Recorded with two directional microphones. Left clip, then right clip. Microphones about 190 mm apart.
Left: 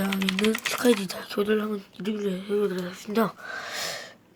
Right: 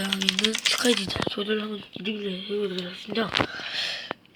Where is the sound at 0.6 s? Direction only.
15° left (ahead or behind).